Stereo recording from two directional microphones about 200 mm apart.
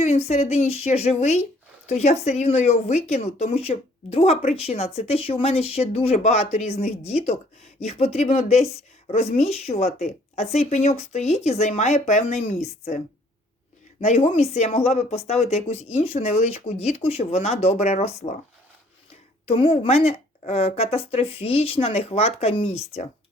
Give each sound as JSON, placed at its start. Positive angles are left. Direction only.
{"t": 0.0, "sound": "speech", "side_deg": 35}
{"t": 14.0, "sound": "speech", "side_deg": 30}
{"t": 19.5, "sound": "a woman's voice", "side_deg": 30}